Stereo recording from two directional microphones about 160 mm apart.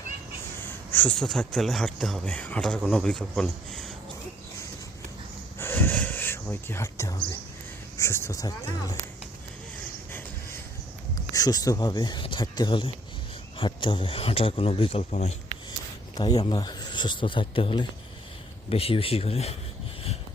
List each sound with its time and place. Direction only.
0.6 s speech: 10° left (ahead or behind)
5.5 s a sound: 15° left (ahead or behind)
7.9 s speech: 15° left (ahead or behind)
10.1 s a sound: 15° left (ahead or behind)
11.3 s a man's voice: 25° left (ahead or behind); by 15.4 s 40° left (ahead or behind)
16.1 s a man's voice: 25° left (ahead or behind)